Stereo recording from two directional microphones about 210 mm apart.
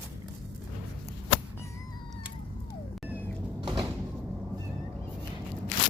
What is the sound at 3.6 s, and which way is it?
Sliding door, 20° right (ahead or behind).